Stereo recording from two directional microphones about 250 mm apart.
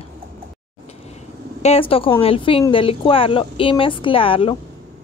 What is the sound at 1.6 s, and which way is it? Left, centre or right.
Speech, left.